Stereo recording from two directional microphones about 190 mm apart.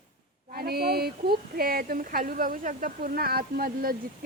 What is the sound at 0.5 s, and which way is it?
Speech, 55° right (ahead or behind).